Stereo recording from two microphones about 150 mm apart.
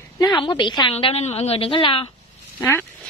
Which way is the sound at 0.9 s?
40° left (ahead or behind).